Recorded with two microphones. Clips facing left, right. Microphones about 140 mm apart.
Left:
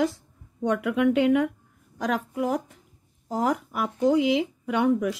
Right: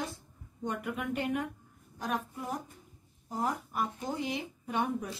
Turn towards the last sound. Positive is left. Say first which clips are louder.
# left 10 dB
turn(degrees=85)